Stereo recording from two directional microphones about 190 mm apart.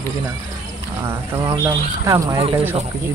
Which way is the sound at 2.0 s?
15° right (ahead or behind).